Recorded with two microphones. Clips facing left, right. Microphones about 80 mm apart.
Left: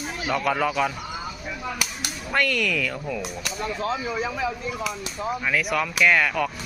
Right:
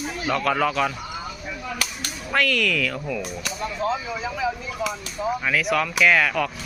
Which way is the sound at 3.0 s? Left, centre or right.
Centre.